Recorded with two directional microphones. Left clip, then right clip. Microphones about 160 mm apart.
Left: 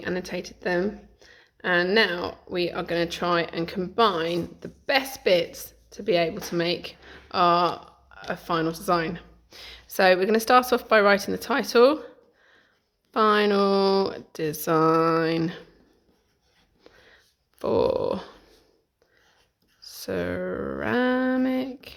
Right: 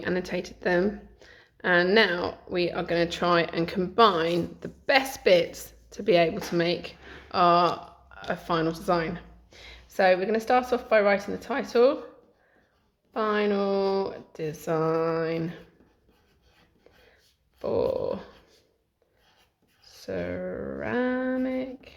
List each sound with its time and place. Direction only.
0.0 s speech: 5° left (ahead or behind); by 11.9 s 55° left (ahead or behind)
13.1 s speech: 55° left (ahead or behind)
17.6 s speech: 55° left (ahead or behind)
19.8 s a sound: 50° left (ahead or behind)